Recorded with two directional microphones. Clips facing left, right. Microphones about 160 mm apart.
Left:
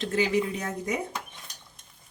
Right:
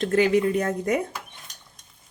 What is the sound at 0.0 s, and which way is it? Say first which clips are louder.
Speech: right 6 dB; 55° right (ahead or behind).